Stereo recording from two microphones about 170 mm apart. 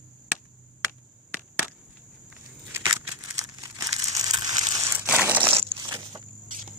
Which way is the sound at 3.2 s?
20° right (ahead or behind).